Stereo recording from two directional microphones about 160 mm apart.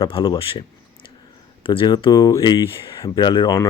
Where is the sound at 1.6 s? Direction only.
35° left (ahead or behind).